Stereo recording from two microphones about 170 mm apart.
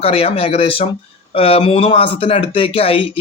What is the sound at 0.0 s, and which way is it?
Speech, 35° left (ahead or behind).